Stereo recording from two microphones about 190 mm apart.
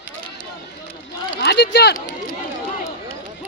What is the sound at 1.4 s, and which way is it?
Speech, 60° left (ahead or behind).